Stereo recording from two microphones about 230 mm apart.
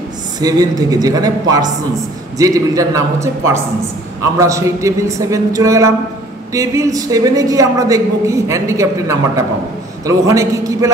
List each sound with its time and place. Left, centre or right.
0.4 s a woman's voice: centre
2.3 s a woman's voice: centre